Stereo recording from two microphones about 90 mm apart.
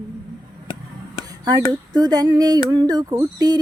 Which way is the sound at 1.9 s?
45° right (ahead or behind).